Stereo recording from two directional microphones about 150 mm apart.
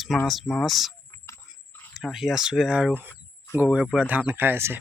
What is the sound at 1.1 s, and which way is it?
Pig, 20° left (ahead or behind).